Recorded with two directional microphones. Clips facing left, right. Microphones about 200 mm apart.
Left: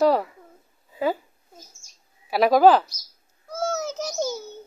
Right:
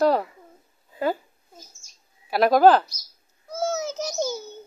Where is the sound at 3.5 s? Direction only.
5° right (ahead or behind).